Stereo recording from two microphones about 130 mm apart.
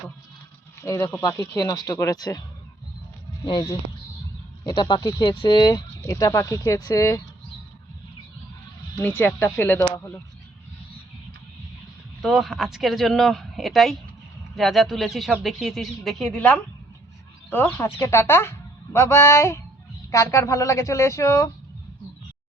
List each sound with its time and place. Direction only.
0.8 s speech: 20° left (ahead or behind)
3.4 s speech: 35° left (ahead or behind)
9.0 s speech: 15° left (ahead or behind)
12.2 s speech: centre (ahead or behind); by 21.5 s 25° left (ahead or behind)